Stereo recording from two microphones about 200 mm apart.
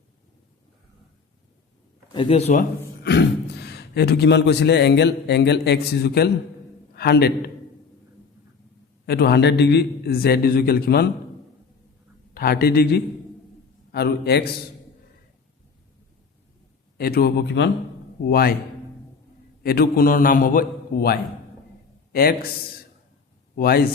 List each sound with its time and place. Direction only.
2.1 s speech: 30° left (ahead or behind)
3.0 s a man's voice: 55° left (ahead or behind)
9.0 s a man's voice: 55° left (ahead or behind)
12.3 s a man's voice: 50° left (ahead or behind)
17.0 s a man's voice: 50° left (ahead or behind)
19.6 s a man's voice: 50° left (ahead or behind)
23.6 s a man's voice: 50° left (ahead or behind)